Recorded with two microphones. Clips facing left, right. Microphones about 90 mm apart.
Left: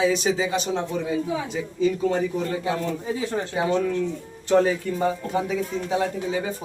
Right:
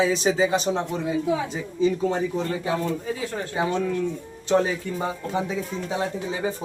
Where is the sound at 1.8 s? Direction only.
25° right (ahead or behind).